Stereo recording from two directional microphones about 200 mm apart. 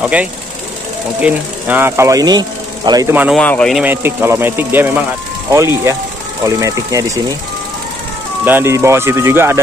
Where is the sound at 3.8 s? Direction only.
10° right (ahead or behind).